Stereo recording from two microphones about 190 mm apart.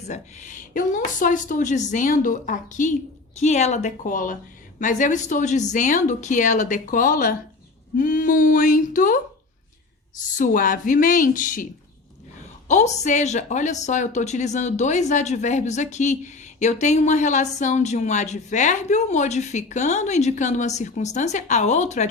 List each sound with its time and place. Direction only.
0.0 s a woman's voice: 40° left (ahead or behind)
10.2 s speech: 45° left (ahead or behind)
12.6 s a woman's voice: 35° left (ahead or behind)